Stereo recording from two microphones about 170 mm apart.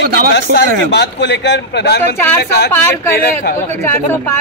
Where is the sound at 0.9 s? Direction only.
90° left.